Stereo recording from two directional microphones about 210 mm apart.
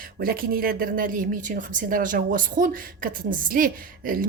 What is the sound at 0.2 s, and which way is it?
A woman's voice, 45° right (ahead or behind).